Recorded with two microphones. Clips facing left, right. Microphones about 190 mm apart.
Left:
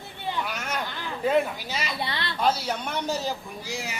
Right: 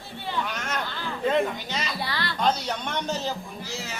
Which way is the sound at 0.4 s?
10° left (ahead or behind).